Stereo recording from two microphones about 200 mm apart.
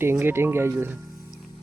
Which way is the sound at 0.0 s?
10° right (ahead or behind).